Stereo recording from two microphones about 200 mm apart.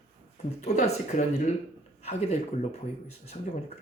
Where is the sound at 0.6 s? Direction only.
35° left (ahead or behind).